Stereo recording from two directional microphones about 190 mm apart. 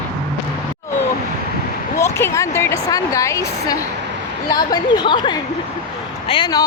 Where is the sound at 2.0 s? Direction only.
15° left (ahead or behind).